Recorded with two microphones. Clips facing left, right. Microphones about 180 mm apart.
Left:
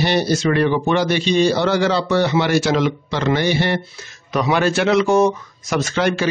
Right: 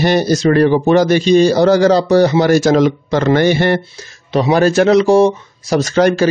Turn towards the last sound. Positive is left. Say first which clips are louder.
# right 7 dB
turn(degrees=-40)  # may be behind; listen again after turning